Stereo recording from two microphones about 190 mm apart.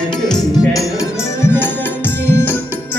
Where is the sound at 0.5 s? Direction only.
20° left (ahead or behind).